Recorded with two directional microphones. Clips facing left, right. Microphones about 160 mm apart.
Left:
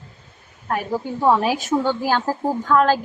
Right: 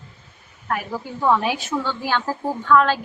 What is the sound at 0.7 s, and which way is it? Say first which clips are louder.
A woman's voice: left 3 dB; 30° left (ahead or behind).